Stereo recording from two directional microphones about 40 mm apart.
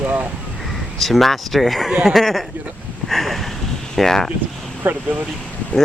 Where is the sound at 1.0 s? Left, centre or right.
Centre.